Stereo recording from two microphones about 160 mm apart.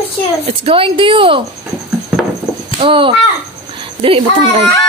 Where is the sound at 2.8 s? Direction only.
30° right (ahead or behind).